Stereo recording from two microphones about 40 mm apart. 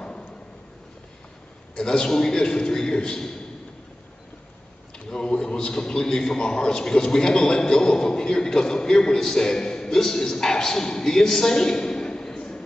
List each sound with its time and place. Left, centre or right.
1.8 s a man's voice: centre
5.1 s a man's voice: left